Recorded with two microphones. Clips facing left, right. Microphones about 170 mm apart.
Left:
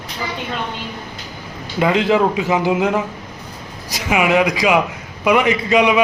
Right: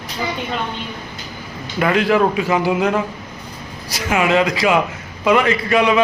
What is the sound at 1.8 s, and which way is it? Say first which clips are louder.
A man's voice: even; 20° left (ahead or behind).